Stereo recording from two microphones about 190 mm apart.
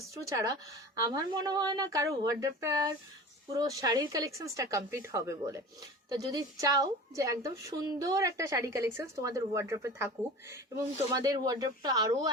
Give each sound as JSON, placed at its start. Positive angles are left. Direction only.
{"t": 0.2, "sound": "a woman's voice", "side_deg": -15}
{"t": 11.1, "sound": "a woman's voice", "side_deg": -20}